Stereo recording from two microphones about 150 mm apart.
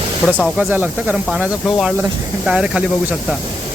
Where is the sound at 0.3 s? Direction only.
5° right (ahead or behind).